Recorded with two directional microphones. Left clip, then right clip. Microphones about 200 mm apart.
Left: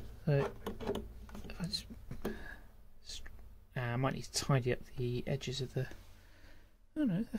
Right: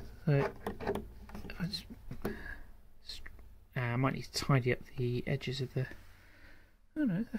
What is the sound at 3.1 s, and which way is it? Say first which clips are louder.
Speech: right 1 dB; 15° right (ahead or behind).